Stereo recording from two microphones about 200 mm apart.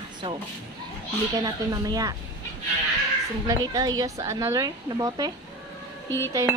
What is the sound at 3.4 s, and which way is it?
Speech, 20° right (ahead or behind).